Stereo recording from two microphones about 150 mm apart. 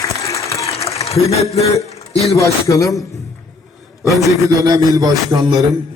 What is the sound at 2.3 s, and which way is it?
Speech, 20° left (ahead or behind).